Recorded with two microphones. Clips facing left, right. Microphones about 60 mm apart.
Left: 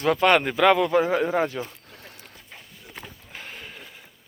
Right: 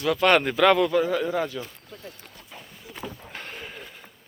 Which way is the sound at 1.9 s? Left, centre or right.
Left.